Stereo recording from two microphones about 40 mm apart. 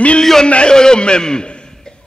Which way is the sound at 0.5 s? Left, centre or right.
Left.